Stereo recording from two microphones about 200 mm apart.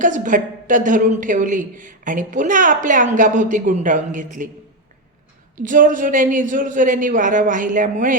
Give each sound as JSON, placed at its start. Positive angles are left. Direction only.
{"t": 0.0, "sound": "a woman's voice", "side_deg": -40}
{"t": 5.6, "sound": "a woman's voice", "side_deg": -40}